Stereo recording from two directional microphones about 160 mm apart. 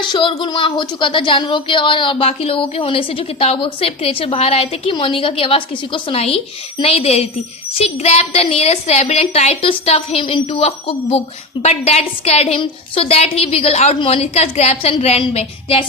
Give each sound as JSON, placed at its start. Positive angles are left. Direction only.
{"t": 0.0, "sound": "speech", "side_deg": 30}